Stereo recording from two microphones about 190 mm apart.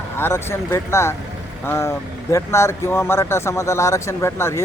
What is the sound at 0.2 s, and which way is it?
Speech, 10° left (ahead or behind).